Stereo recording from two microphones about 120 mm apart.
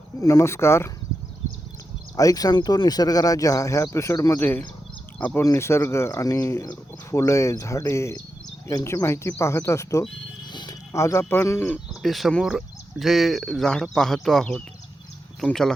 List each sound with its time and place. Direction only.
0.2 s speech: 30° left (ahead or behind)
2.1 s speech: 30° left (ahead or behind)
4.4 s speech: 15° left (ahead or behind)
10.5 s music: 40° left (ahead or behind)
10.9 s speech: 25° left (ahead or behind)
11.9 s speech: centre (ahead or behind)